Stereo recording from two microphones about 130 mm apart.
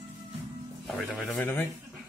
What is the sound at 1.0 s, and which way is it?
Speech, centre (ahead or behind).